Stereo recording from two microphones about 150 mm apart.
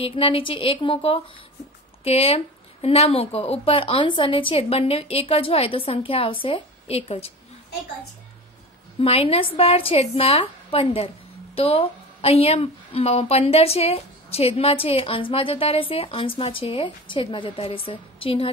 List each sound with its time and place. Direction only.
0.0 s a woman's voice: 35° left (ahead or behind)
9.0 s a woman's voice: 40° left (ahead or behind)